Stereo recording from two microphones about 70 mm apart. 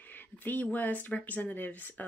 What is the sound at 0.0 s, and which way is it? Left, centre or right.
Speech, left.